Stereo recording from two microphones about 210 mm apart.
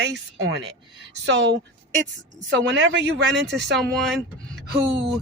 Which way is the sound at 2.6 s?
60° right (ahead or behind).